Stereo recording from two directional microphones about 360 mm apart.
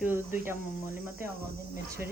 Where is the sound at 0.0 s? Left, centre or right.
Centre.